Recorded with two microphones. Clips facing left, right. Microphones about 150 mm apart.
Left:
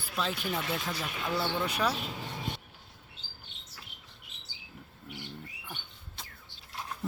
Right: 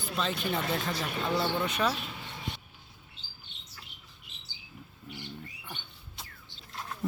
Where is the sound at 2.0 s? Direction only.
40° left (ahead or behind).